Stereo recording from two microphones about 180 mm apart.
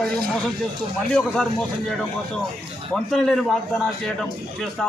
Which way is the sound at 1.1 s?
5° left (ahead or behind).